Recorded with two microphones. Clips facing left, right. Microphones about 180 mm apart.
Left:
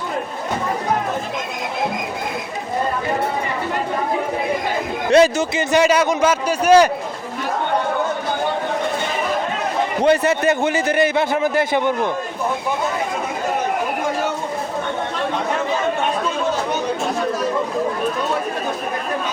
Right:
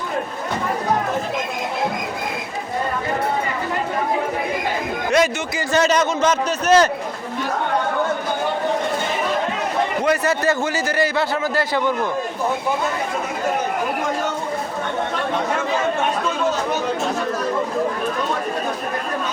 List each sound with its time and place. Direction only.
5.1 s speech: 30° left (ahead or behind)
5.7 s a man's voice: 10° left (ahead or behind)
10.0 s a man's voice: 25° left (ahead or behind)